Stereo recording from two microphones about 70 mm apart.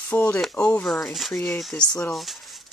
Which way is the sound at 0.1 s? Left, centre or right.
Left.